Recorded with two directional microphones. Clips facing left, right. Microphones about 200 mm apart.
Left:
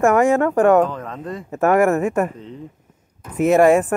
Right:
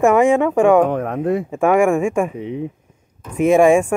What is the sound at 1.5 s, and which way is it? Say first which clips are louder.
Speech: left 1 dB; 10° right (ahead or behind).